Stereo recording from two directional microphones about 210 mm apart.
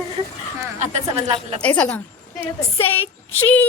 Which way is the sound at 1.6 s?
5° left (ahead or behind).